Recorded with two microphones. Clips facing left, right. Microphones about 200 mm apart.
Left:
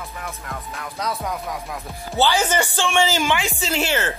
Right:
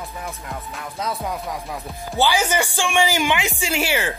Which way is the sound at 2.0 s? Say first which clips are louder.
Even; 15° right (ahead or behind).